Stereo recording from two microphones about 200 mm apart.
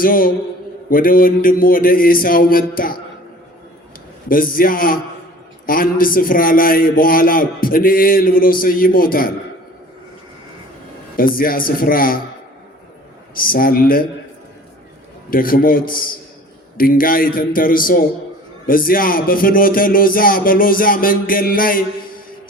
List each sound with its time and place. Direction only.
0.0 s a man's voice: 45° left (ahead or behind)
4.3 s a man's voice: 45° left (ahead or behind)
11.2 s a man's voice: 45° left (ahead or behind)
13.3 s a man's voice: 45° left (ahead or behind)
15.3 s a man's voice: 45° left (ahead or behind)